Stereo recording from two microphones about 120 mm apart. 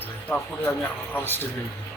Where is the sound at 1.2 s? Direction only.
15° left (ahead or behind).